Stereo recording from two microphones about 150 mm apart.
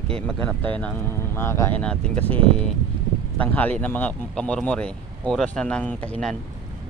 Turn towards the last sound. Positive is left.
turn(degrees=10)  # may be behind; listen again after turning